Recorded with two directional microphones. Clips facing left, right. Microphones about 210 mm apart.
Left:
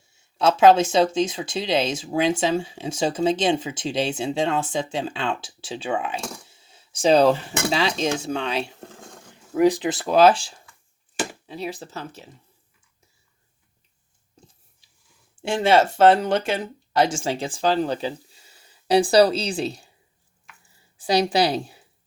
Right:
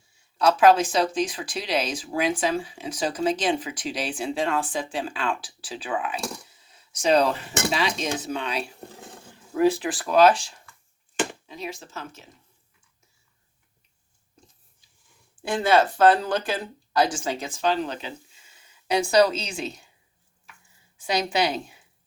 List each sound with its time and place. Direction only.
0.1 s speech: 25° left (ahead or behind)
15.4 s speech: 25° left (ahead or behind)
21.0 s speech: 35° left (ahead or behind)